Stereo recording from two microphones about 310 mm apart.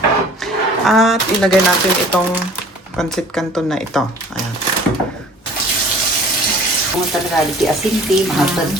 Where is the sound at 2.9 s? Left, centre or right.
Centre.